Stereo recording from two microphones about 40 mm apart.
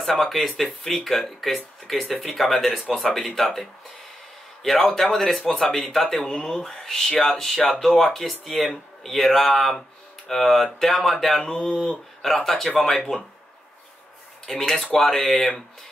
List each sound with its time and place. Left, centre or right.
0.0 s speech: centre
5.1 s speech: centre
11.4 s speech: centre
12.2 s speech: centre
14.6 s speech: centre